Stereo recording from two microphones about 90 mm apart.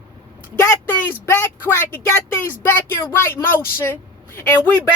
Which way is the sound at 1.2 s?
25° left (ahead or behind).